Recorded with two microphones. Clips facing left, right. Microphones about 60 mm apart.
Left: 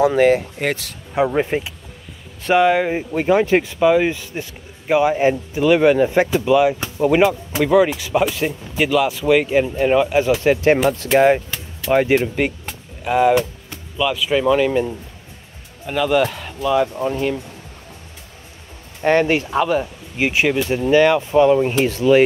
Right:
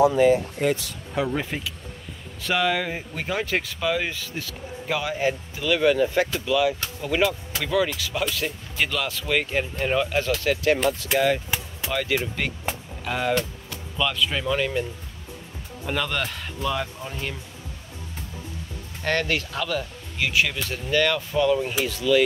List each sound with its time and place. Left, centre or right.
0.1 s speech: left
1.1 s speech: left; by 16.9 s centre
19.0 s speech: left